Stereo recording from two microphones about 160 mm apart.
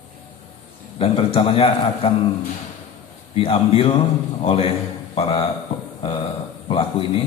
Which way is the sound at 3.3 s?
35° left (ahead or behind).